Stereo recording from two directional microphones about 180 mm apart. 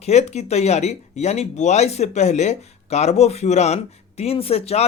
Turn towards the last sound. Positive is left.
turn(degrees=35)  # may be behind; listen again after turning